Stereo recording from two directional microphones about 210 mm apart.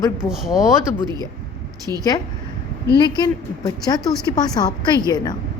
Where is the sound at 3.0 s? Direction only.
20° left (ahead or behind).